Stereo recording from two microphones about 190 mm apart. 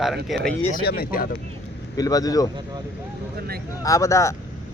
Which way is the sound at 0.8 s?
55° left (ahead or behind).